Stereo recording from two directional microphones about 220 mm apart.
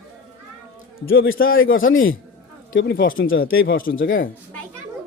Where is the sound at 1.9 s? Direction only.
60° left (ahead or behind).